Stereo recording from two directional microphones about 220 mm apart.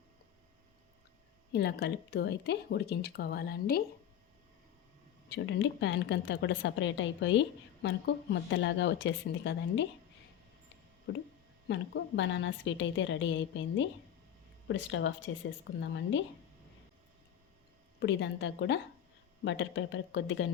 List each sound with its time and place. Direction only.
1.5 s speech: 50° left (ahead or behind)
5.3 s a woman's voice: 55° left (ahead or behind)
11.7 s a woman's voice: 55° left (ahead or behind)
18.0 s a woman's voice: 55° left (ahead or behind)